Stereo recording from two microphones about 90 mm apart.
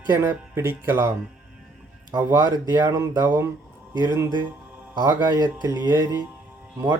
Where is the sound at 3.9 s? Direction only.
40° right (ahead or behind).